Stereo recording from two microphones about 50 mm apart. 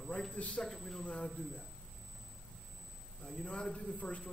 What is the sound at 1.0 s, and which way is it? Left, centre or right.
Speech, left.